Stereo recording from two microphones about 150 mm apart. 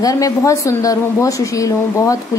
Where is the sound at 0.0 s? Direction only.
25° left (ahead or behind).